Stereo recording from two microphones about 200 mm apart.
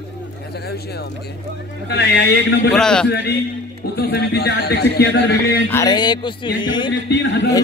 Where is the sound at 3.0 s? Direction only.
55° left (ahead or behind).